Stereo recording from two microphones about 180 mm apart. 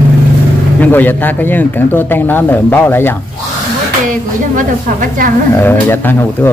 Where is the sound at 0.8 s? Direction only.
10° left (ahead or behind).